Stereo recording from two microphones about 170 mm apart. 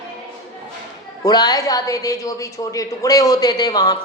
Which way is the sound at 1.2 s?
20° left (ahead or behind).